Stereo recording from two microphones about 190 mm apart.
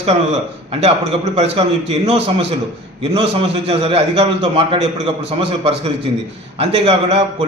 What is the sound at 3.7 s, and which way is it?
A man's voice, 30° right (ahead or behind).